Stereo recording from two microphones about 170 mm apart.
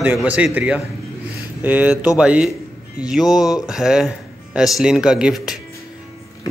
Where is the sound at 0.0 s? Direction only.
10° right (ahead or behind).